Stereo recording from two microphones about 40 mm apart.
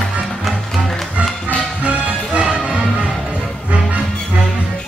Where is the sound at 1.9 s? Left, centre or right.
Right.